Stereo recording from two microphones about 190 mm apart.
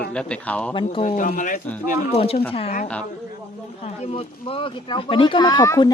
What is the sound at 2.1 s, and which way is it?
Speech, 30° left (ahead or behind).